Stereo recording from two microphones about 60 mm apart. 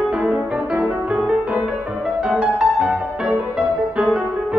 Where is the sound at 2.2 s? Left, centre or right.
Centre.